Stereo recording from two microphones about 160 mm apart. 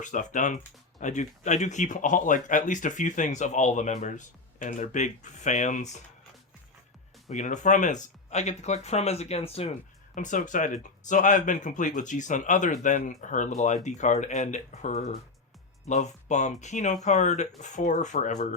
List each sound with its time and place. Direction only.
0.0 s speech: 50° left (ahead or behind)
7.3 s speech: 50° left (ahead or behind)
10.2 s speech: 50° left (ahead or behind)